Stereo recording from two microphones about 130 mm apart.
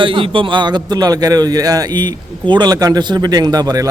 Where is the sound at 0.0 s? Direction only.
40° right (ahead or behind).